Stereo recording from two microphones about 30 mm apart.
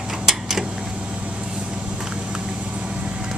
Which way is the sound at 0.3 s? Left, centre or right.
Centre.